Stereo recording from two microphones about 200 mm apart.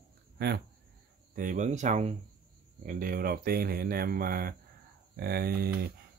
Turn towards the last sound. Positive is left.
turn(degrees=-50)  # may be behind; listen again after turning